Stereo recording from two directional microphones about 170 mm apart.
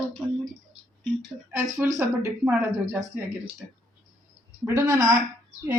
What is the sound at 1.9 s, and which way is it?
Speech, 10° right (ahead or behind).